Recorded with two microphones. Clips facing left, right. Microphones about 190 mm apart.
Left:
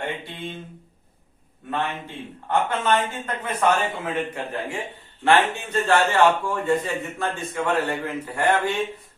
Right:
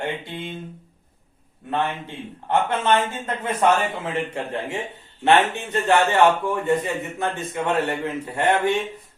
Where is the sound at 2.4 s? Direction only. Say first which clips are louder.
Right 2 dB; 25° right (ahead or behind).